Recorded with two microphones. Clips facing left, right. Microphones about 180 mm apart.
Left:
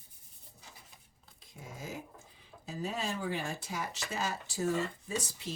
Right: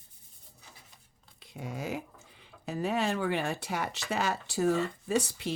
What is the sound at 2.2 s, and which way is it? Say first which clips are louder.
Speech: right 8 dB; 70° right (ahead or behind).